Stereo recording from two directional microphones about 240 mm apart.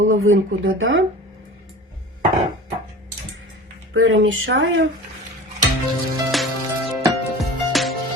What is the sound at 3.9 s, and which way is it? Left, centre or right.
Speech, right.